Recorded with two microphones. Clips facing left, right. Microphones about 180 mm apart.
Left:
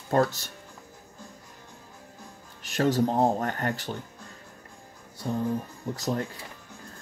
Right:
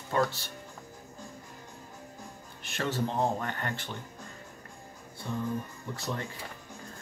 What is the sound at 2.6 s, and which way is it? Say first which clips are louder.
Speech: left 8 dB; 40° left (ahead or behind).